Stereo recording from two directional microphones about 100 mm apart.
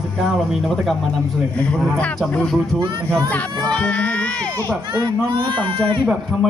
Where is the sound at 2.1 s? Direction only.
5° left (ahead or behind).